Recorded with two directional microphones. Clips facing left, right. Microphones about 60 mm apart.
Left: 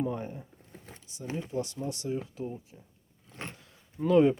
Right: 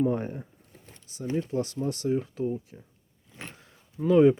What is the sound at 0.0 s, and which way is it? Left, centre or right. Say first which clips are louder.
Speech: right 6 dB; right.